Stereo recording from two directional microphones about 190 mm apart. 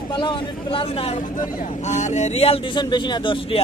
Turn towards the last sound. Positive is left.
turn(degrees=25)  # may be behind; listen again after turning